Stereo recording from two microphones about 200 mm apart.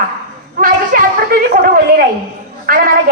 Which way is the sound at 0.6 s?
45° right (ahead or behind).